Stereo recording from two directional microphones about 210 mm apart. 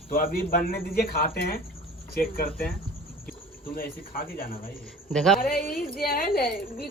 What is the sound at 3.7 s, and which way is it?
Speech, 45° left (ahead or behind).